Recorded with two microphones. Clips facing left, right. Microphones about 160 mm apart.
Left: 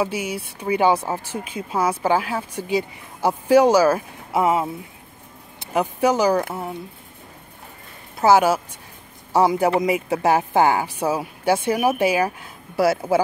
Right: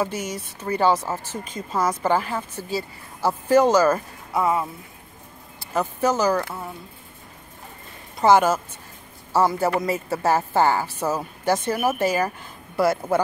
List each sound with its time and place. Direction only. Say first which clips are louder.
0.0 s speech: left 2 dB; 10° left (ahead or behind)
4.3 s speech: left 3 dB; 20° left (ahead or behind)
8.2 s speech: left 1 dB; 5° left (ahead or behind)